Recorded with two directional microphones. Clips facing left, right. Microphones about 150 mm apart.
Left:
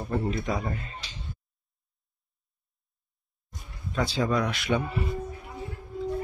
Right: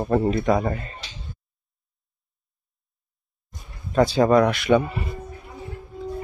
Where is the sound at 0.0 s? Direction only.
80° right.